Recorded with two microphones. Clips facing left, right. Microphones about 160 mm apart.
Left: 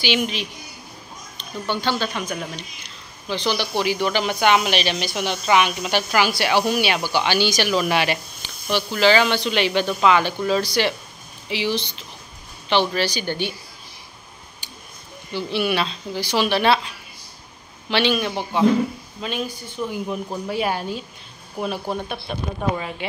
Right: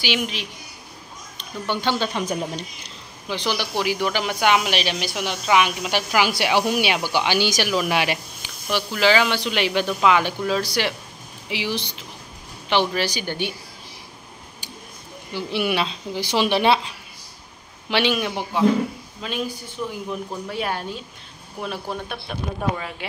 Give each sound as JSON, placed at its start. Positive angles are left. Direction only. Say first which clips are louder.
{"t": 0.0, "sound": "a woman's voice", "louder": "left 3 dB", "side_deg": 0}
{"t": 1.4, "sound": "speech", "louder": "even", "side_deg": -15}
{"t": 3.3, "sound": "speech", "louder": "left 2 dB", "side_deg": -10}
{"t": 15.3, "sound": "a woman's voice", "louder": "left 1 dB", "side_deg": -15}